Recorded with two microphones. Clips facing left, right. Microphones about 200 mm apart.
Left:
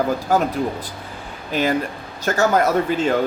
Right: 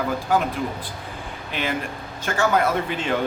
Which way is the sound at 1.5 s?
40° left (ahead or behind).